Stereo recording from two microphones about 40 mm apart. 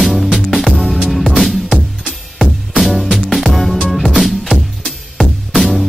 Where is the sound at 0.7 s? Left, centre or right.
Centre.